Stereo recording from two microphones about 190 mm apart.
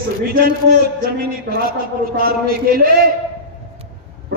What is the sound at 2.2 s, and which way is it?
Speech, 50° right (ahead or behind).